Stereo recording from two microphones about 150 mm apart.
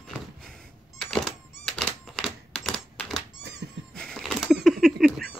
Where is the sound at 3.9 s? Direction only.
5° left (ahead or behind).